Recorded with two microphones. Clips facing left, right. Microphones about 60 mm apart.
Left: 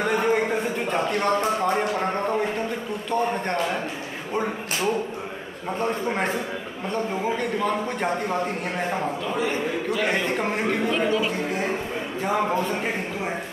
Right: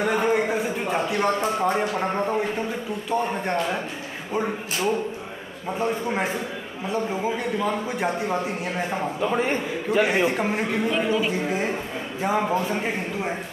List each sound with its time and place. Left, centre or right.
0.0 s a sound: centre
3.1 s speech: centre
9.3 s a man's voice: right
10.0 s a man's voice: centre